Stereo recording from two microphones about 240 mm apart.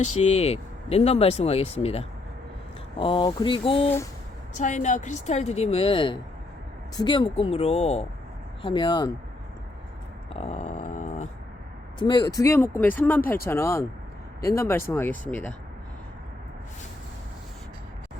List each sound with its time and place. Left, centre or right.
0.2 s speech: left
10.3 s a sound: left
11.9 s speech: centre